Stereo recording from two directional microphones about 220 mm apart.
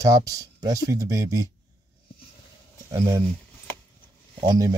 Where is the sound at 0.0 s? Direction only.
15° right (ahead or behind).